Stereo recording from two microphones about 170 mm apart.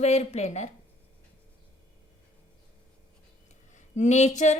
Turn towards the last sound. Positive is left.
turn(degrees=45)  # may be behind; listen again after turning